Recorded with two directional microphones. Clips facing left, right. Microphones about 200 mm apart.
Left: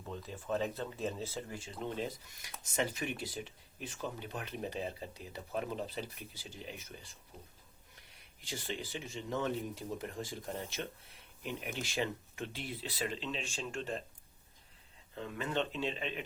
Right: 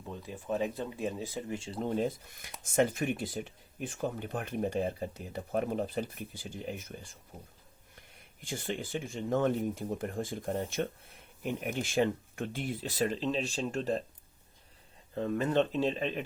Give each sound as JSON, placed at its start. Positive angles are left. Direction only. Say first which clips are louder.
{"t": 0.1, "sound": "speech", "louder": "right 2 dB", "side_deg": -15}
{"t": 1.8, "sound": "speech", "louder": "right 7 dB", "side_deg": -45}
{"t": 15.1, "sound": "speech", "louder": "right 8 dB", "side_deg": -40}